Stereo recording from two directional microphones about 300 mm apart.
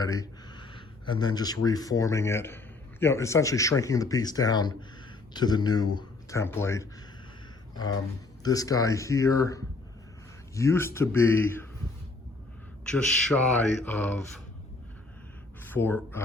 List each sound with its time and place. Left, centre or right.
0.0 s speech: centre
8.4 s speech: centre
12.8 s a man's voice: centre
15.6 s speech: centre